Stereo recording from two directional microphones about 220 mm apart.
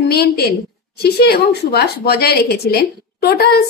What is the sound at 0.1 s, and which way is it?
A woman's voice, 45° left (ahead or behind).